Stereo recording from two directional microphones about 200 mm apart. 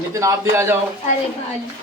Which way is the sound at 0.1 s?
15° right (ahead or behind).